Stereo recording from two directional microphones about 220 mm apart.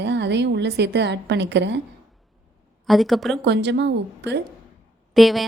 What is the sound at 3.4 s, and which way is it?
Speech, 50° right (ahead or behind).